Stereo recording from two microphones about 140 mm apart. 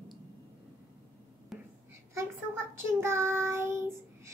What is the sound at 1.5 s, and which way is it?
Whispering, centre (ahead or behind).